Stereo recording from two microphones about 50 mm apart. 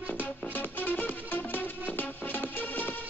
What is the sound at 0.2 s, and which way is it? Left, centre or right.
Music, left.